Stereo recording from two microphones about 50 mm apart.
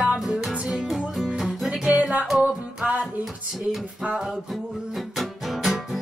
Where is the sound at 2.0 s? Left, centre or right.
Right.